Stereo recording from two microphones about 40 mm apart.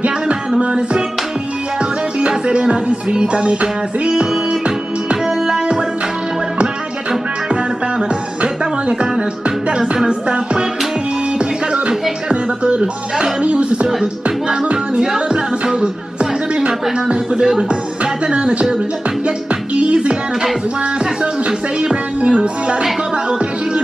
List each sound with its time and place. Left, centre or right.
0.6 s music: right
4.1 s music: centre
10.0 s music: right
12.3 s speech: right
15.0 s music: right
17.1 s speech: right
19.2 s music: right
21.0 s speech: right